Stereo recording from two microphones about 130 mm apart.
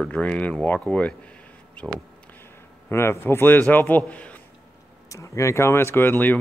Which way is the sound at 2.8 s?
20° left (ahead or behind).